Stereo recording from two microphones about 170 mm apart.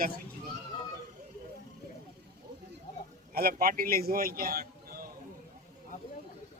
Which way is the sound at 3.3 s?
60° right (ahead or behind).